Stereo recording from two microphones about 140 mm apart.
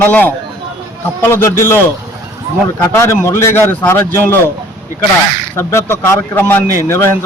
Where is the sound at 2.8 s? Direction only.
20° left (ahead or behind).